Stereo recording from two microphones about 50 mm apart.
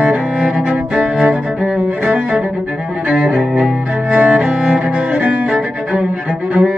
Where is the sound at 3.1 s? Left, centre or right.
Right.